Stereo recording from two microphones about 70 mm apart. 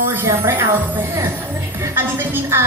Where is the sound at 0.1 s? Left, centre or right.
Right.